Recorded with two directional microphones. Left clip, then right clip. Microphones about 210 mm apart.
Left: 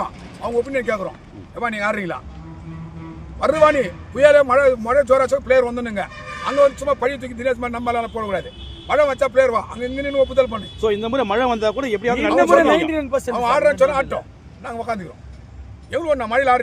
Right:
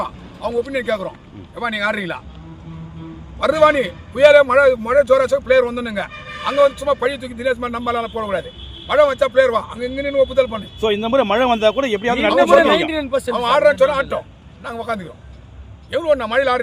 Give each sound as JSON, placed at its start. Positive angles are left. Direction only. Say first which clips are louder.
{"t": 0.0, "sound": "a man's voice", "louder": "right 2 dB", "side_deg": 0}
{"t": 3.4, "sound": "a man's voice", "louder": "right 1 dB", "side_deg": -5}
{"t": 10.8, "sound": "a man's voice", "louder": "right 3 dB", "side_deg": -55}
{"t": 12.5, "sound": "speech", "louder": "right 1 dB", "side_deg": 10}
{"t": 13.3, "sound": "a man's voice", "louder": "right 3 dB", "side_deg": 0}